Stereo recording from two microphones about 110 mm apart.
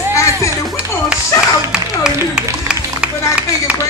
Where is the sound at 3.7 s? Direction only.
15° right (ahead or behind).